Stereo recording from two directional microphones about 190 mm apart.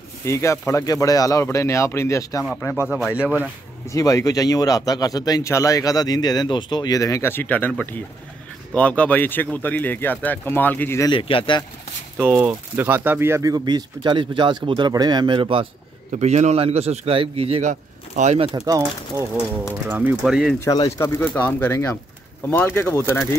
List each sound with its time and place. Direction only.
0.2 s speech: 15° left (ahead or behind)
2.9 s speech: 5° right (ahead or behind)
3.8 s speech: 15° left (ahead or behind)
11.1 s speech: 30° left (ahead or behind)
12.2 s speech: 10° right (ahead or behind); by 15.6 s 25° right (ahead or behind)
16.1 s a man's voice: 35° right (ahead or behind)
18.5 s speech: 20° right (ahead or behind); by 20.5 s centre (ahead or behind)
20.6 s speech: 15° left (ahead or behind)